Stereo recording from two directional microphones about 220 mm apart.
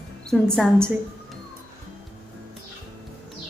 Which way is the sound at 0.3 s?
5° left (ahead or behind).